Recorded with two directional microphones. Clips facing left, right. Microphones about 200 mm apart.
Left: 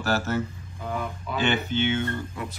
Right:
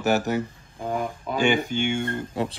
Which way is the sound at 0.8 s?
40° right (ahead or behind).